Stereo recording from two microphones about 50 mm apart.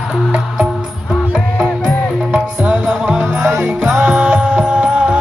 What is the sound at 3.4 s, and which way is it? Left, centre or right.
Music, right.